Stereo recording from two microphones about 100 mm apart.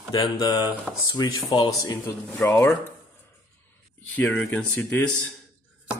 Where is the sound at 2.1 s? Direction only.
25° left (ahead or behind).